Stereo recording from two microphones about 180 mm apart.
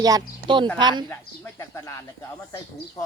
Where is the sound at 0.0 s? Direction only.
25° right (ahead or behind).